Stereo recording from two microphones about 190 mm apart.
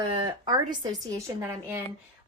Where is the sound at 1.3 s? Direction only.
10° right (ahead or behind).